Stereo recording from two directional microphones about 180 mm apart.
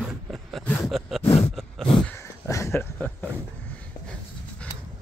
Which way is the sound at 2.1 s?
15° left (ahead or behind).